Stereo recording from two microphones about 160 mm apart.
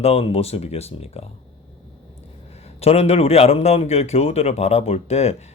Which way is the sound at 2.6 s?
40° left (ahead or behind).